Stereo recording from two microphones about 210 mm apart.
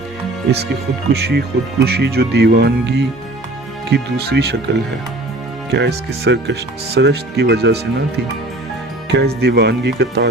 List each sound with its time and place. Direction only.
1.1 s speech: 50° right (ahead or behind)